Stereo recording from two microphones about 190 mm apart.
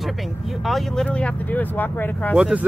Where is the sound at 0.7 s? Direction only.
Centre (ahead or behind).